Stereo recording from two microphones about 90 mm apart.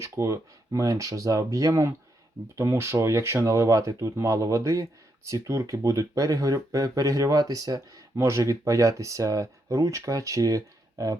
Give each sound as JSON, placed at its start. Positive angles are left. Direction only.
{"t": 0.0, "sound": "speech", "side_deg": -35}